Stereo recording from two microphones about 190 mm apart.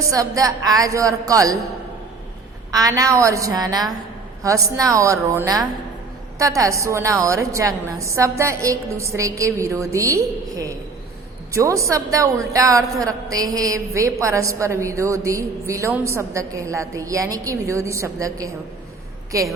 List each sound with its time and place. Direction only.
0.1 s a woman's voice: 20° right (ahead or behind)
2.7 s a woman's voice: 20° right (ahead or behind)
11.5 s a woman's voice: 15° right (ahead or behind)